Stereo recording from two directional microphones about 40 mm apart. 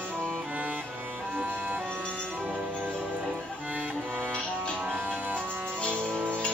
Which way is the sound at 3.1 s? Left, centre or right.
Right.